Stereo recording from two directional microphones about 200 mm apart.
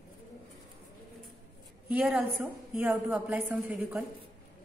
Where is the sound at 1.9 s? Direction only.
5° right (ahead or behind).